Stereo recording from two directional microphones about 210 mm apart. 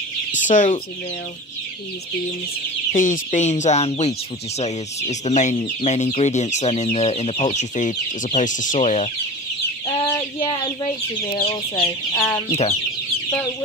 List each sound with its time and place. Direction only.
0.3 s chicken: 35° left (ahead or behind)
2.9 s speech: 35° left (ahead or behind)
11.4 s chicken: 30° left (ahead or behind)
12.1 s chicken: 15° left (ahead or behind)
12.4 s chicken: 30° left (ahead or behind)